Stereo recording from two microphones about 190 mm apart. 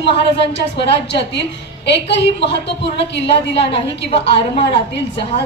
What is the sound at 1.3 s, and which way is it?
A woman's voice, 65° left (ahead or behind).